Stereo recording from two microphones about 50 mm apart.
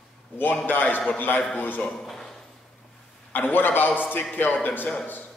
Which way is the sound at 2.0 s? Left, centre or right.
Centre.